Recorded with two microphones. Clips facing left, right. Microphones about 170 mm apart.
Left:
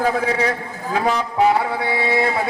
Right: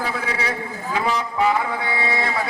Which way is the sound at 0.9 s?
55° left (ahead or behind).